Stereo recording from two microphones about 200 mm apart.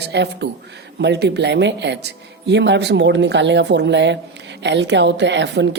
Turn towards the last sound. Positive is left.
turn(degrees=-60)  # may be behind; listen again after turning